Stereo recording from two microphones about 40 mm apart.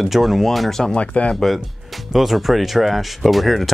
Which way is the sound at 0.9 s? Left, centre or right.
Left.